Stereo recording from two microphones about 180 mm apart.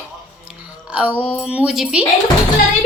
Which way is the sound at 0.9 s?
5° right (ahead or behind).